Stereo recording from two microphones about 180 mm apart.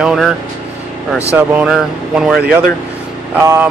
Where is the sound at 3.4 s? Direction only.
10° right (ahead or behind).